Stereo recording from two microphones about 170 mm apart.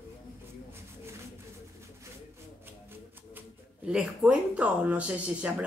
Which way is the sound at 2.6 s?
10° right (ahead or behind).